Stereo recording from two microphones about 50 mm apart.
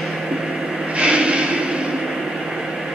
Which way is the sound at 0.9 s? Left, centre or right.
Right.